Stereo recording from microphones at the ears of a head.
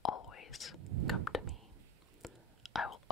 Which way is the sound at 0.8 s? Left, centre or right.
Right.